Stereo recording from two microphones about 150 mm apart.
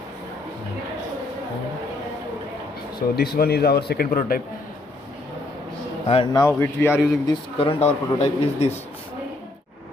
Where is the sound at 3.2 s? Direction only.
90° left; by 4.4 s 70° left (ahead or behind).